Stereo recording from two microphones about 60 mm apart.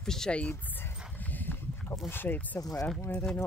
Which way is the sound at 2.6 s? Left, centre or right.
Left.